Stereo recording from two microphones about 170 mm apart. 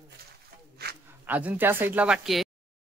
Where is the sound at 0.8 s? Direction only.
70° right (ahead or behind).